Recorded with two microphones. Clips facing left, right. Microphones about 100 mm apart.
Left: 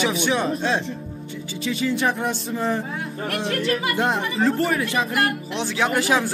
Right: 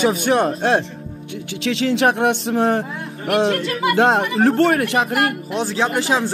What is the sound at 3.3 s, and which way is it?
Speech, 90° right.